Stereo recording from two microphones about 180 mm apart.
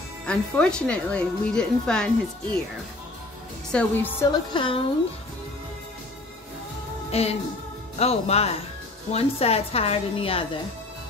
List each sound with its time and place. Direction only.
0.2 s speech: 5° left (ahead or behind)
3.7 s a woman's voice: 10° left (ahead or behind)
4.3 s a woman's voice: 25° left (ahead or behind)
7.1 s a woman's voice: 35° left (ahead or behind)